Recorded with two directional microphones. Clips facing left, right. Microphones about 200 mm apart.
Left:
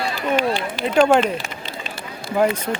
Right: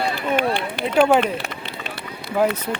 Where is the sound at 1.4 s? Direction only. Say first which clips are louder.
Even; 60° right (ahead or behind).